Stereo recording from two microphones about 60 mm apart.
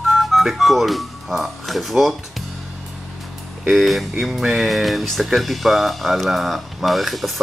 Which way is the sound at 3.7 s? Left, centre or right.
Centre.